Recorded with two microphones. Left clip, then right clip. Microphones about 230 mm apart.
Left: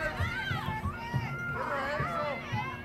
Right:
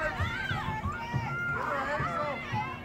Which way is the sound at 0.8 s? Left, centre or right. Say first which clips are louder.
Right 2 dB; left.